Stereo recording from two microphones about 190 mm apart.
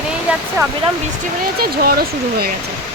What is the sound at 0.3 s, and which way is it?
Speech, 5° right (ahead or behind).